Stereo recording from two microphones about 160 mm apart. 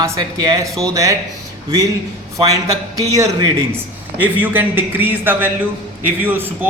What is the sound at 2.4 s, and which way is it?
A man's voice, 20° right (ahead or behind).